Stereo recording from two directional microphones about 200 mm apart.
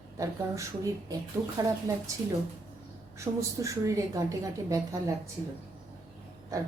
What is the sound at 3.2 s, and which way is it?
A woman's voice, 15° right (ahead or behind).